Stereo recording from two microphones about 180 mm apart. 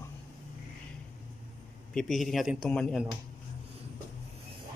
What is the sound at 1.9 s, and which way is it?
A man's voice, centre (ahead or behind).